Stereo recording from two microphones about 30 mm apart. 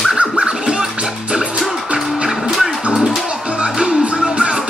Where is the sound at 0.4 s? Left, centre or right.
Right.